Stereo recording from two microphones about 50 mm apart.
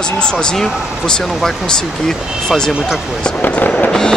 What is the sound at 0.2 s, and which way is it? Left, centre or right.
Speech, centre.